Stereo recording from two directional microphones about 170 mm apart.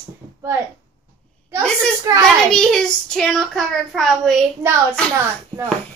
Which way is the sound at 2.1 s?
20° right (ahead or behind).